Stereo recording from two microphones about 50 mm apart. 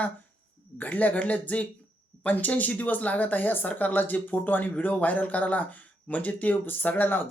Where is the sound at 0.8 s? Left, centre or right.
Left.